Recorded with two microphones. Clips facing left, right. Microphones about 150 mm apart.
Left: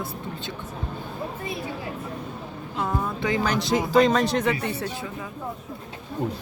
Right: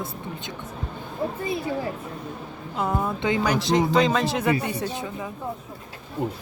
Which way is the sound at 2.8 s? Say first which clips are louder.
Right 2 dB; 20° right (ahead or behind).